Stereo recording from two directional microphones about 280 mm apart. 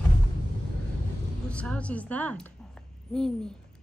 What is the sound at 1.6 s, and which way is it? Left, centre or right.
Speech, centre.